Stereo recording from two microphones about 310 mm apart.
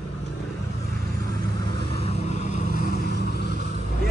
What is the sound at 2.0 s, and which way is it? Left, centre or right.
Vehicle, centre.